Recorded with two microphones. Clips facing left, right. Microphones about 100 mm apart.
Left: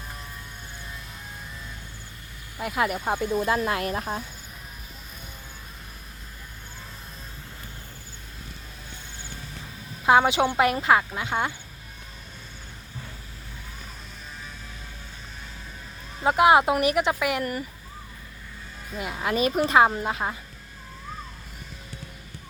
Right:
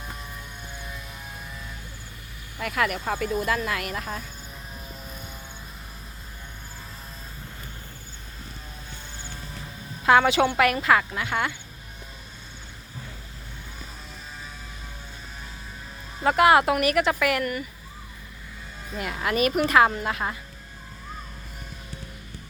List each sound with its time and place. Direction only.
2.6 s speech: 20° left (ahead or behind)
10.1 s a woman's voice: 15° left (ahead or behind)
16.2 s speech: 20° left (ahead or behind)
18.9 s speech: 20° left (ahead or behind)